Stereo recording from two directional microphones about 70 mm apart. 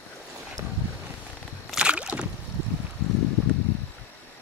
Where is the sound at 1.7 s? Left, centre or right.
Centre.